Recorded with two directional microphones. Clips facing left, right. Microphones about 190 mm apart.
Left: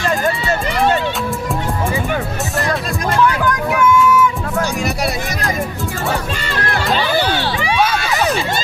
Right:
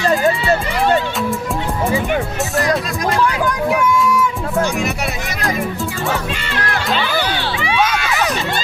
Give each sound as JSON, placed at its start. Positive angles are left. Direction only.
{"t": 3.7, "sound": "music", "side_deg": -35}
{"t": 6.5, "sound": "music", "side_deg": 40}
{"t": 8.1, "sound": "a sound", "side_deg": 30}